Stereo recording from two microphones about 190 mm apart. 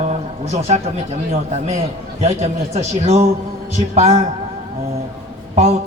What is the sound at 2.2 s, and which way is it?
A man's voice, 35° right (ahead or behind).